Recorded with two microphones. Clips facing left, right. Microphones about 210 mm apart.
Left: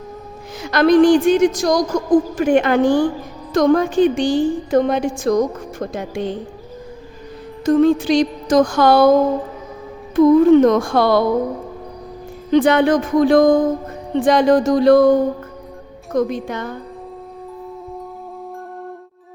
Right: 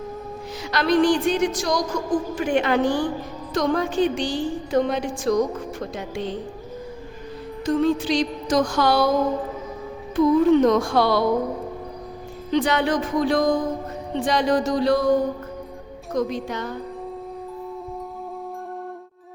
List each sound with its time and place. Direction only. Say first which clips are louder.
0.6 s a woman's voice: left 7 dB; 50° left (ahead or behind)
7.6 s a woman's voice: left 7 dB; 45° left (ahead or behind)
10.2 s a woman's voice: left 6 dB; 50° left (ahead or behind)
12.5 s a woman's voice: left 8 dB; 50° left (ahead or behind)
16.1 s a woman's voice: left 5 dB; 55° left (ahead or behind)